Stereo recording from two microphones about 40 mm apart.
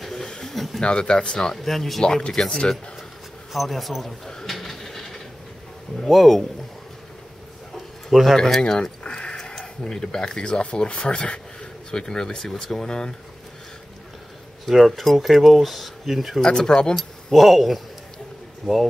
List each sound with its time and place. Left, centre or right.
0.0 s a sound: centre
0.7 s speech: left
1.6 s speech: centre
2.3 s speech: centre
3.5 s speech: centre
4.5 s a sound: centre
6.0 s speech: centre
8.1 s speech: centre
8.5 s keys jangling: centre
9.4 s speech: centre
10.6 s speech: left
14.7 s speech: centre
16.3 s speech: centre
16.9 s speech: centre